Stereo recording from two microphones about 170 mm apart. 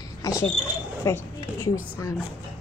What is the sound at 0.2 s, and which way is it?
Cricket, 20° left (ahead or behind).